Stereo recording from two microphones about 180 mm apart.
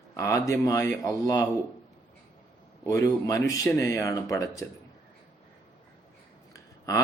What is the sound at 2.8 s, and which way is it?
Speech, 15° left (ahead or behind).